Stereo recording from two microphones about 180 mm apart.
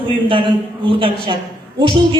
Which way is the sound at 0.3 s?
30° right (ahead or behind).